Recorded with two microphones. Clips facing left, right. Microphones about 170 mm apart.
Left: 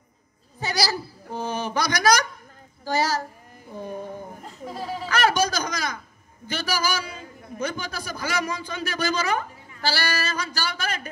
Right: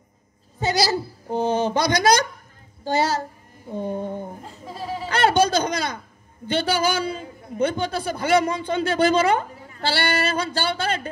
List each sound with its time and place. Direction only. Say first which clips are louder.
0.6 s a woman's voice: right 5 dB; 25° right (ahead or behind)
5.0 s a sound: right 4 dB; 25° right (ahead or behind)
6.4 s a man's voice: right 6 dB; 30° right (ahead or behind)